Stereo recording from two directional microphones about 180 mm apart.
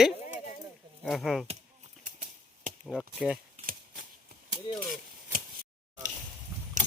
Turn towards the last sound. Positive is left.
turn(degrees=-55)  # may be behind; listen again after turning